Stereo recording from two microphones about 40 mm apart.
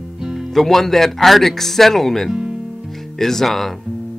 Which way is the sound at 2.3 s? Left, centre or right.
Right.